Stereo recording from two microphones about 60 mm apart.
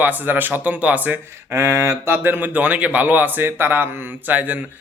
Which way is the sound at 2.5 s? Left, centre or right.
Right.